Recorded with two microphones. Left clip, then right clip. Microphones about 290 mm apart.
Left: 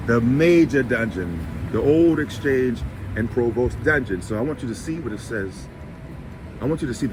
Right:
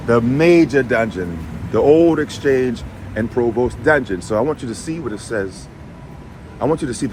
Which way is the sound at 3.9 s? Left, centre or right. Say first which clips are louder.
Right 7 dB; centre.